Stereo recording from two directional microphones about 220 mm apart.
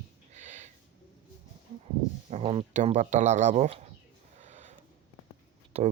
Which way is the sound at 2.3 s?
30° right (ahead or behind).